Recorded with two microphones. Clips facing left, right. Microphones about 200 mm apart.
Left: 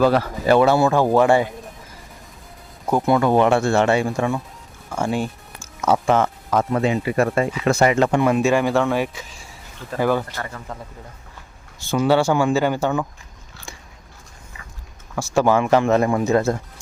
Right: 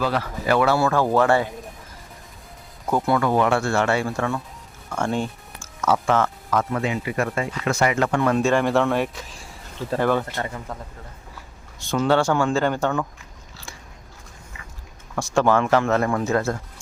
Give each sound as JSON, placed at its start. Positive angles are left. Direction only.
{"t": 0.0, "sound": "speech", "side_deg": 40}
{"t": 0.4, "sound": "speech", "side_deg": 25}
{"t": 2.9, "sound": "speech", "side_deg": 20}
{"t": 8.2, "sound": "speech", "side_deg": 10}
{"t": 10.3, "sound": "speech", "side_deg": -20}
{"t": 11.8, "sound": "speech", "side_deg": 5}
{"t": 15.1, "sound": "speech", "side_deg": 5}